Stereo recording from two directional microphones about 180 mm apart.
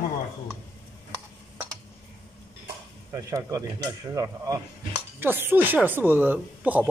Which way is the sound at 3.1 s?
20° right (ahead or behind).